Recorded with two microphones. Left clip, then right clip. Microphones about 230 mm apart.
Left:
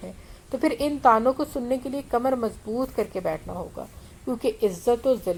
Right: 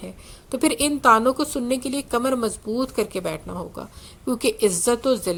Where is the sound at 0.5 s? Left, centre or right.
Right.